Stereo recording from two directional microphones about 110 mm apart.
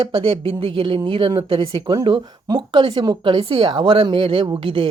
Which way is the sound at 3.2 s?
50° right (ahead or behind).